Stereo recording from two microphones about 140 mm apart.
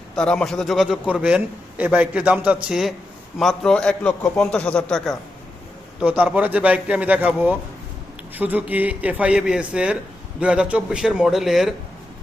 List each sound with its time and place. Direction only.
0.2 s a man's voice: 5° left (ahead or behind)
6.0 s a man's voice: 10° right (ahead or behind)